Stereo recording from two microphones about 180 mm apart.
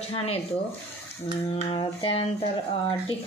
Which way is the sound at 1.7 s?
30° left (ahead or behind).